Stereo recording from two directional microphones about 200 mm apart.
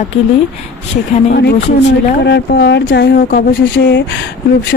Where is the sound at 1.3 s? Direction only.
55° left (ahead or behind).